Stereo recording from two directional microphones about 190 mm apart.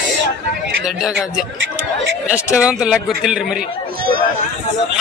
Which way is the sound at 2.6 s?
5° right (ahead or behind).